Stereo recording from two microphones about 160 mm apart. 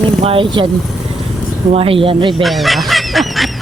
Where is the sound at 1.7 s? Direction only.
35° right (ahead or behind).